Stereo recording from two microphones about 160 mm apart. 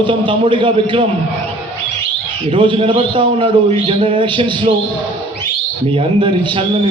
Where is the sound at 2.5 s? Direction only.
30° right (ahead or behind).